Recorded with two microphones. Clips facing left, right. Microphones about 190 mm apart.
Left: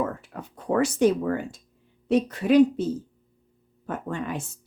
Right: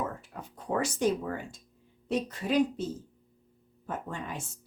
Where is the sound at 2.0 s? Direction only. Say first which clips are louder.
Left 9 dB; 65° left (ahead or behind).